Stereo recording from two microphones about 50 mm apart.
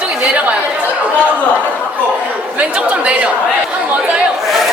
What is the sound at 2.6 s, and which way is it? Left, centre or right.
Chatter, right.